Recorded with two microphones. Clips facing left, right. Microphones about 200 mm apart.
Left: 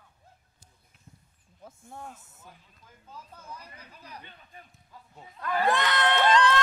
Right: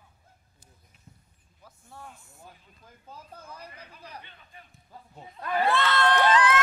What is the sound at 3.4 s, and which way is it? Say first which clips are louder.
Speech: right 1 dB; 55° right (ahead or behind).